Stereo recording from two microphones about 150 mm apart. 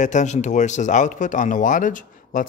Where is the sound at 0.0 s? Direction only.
55° left (ahead or behind).